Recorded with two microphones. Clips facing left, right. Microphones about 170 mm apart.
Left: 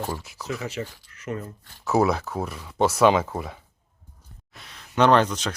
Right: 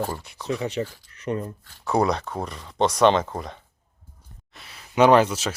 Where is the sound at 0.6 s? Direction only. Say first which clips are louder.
Right 4 dB; 35° right (ahead or behind).